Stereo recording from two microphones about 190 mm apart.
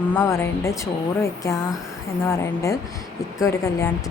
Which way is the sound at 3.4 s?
15° left (ahead or behind).